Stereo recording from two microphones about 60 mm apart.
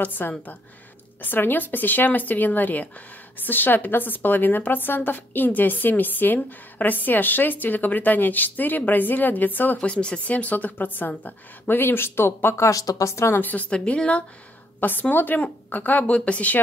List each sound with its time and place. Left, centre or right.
0.0 s a woman's voice: left
9.8 s a woman's voice: centre; by 12.7 s left
12.7 s a woman's voice: left
13.1 s speech: left
13.4 s a woman's voice: left
13.7 s a woman's voice: centre
14.8 s a woman's voice: left